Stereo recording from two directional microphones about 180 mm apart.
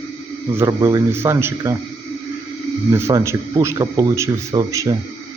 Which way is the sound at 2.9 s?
15° right (ahead or behind).